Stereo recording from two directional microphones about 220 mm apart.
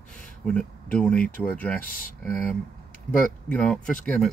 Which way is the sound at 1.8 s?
40° left (ahead or behind).